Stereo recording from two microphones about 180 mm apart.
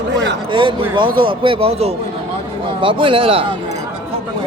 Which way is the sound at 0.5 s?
25° right (ahead or behind).